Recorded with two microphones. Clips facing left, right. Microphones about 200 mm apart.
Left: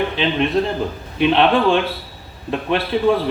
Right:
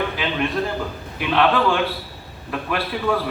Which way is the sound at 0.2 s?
25° left (ahead or behind).